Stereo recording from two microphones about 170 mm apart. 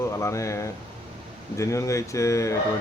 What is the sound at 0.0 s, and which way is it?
Speech, 15° left (ahead or behind).